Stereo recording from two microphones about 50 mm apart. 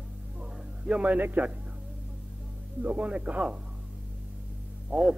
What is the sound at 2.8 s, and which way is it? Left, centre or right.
Speech, right.